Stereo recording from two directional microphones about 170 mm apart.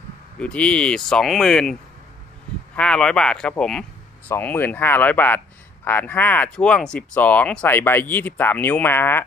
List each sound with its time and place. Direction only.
0.4 s speech: 5° left (ahead or behind)